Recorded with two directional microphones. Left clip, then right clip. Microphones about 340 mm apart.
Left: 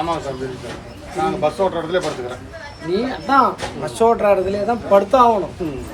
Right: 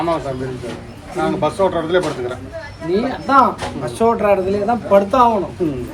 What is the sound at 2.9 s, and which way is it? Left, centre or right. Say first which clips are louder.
A man's voice: right 2 dB; centre.